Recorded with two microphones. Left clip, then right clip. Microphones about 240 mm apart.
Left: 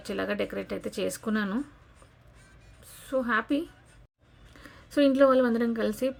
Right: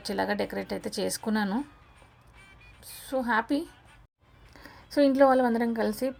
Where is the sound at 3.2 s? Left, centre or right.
Centre.